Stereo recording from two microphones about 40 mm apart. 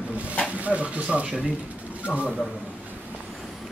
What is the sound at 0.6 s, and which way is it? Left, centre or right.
Speech, right.